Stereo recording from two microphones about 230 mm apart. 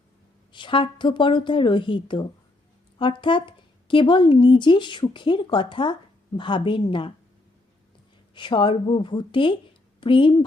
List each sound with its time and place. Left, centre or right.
0.5 s speech: left
8.4 s speech: left